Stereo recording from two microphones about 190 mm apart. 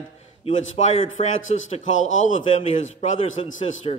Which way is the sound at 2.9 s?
40° left (ahead or behind).